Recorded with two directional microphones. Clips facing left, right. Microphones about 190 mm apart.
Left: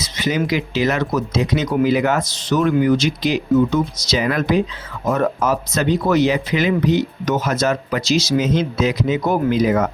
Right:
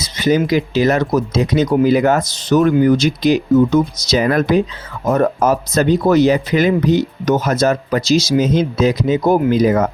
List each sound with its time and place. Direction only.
0.2 s speech: 40° right (ahead or behind)